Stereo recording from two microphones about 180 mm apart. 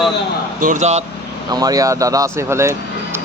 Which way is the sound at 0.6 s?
40° right (ahead or behind).